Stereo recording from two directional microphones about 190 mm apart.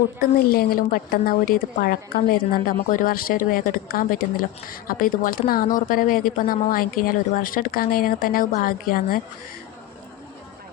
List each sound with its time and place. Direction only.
0.2 s a woman's voice: 50° left (ahead or behind)